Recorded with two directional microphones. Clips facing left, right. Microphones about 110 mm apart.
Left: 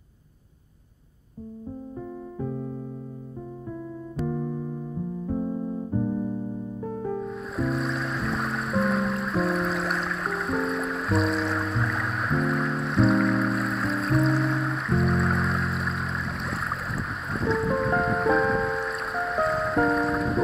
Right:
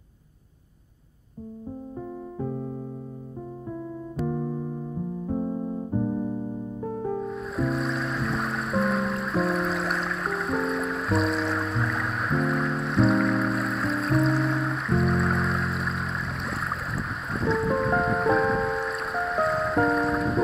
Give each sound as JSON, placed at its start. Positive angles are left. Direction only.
{"t": 2.3, "sound": "keyboard", "side_deg": -30}
{"t": 4.3, "sound": "keyboard", "side_deg": -30}
{"t": 7.2, "sound": "music", "side_deg": 0}